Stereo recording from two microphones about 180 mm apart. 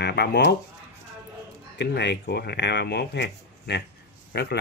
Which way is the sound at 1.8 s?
70° left (ahead or behind).